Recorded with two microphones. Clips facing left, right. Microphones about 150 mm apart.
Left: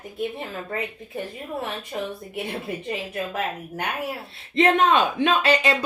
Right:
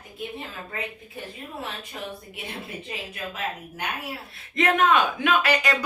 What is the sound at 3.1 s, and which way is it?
Speech, 55° left (ahead or behind).